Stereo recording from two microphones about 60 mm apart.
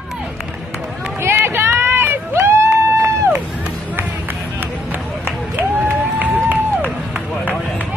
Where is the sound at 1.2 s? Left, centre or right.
Right.